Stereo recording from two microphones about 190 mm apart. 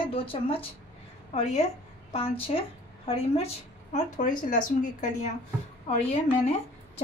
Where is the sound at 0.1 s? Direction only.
30° left (ahead or behind).